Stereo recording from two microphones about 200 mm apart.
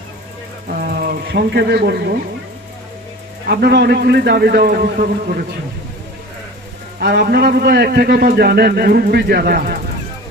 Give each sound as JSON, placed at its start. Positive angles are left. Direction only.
{"t": 0.8, "sound": "a man's voice", "side_deg": -55}
{"t": 3.4, "sound": "a man's voice", "side_deg": -55}
{"t": 7.0, "sound": "a man's voice", "side_deg": -50}